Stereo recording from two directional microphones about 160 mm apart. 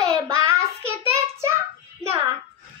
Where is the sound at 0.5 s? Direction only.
15° right (ahead or behind).